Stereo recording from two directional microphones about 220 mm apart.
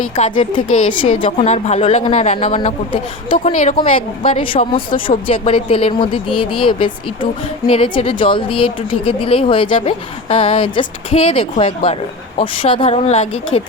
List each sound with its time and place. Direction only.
0.0 s a woman's voice: 25° left (ahead or behind)